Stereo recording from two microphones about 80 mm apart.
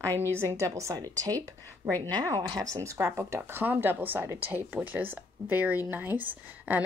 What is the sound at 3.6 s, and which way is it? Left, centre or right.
Speech, right.